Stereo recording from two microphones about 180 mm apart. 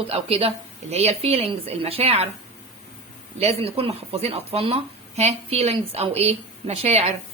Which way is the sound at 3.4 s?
35° right (ahead or behind).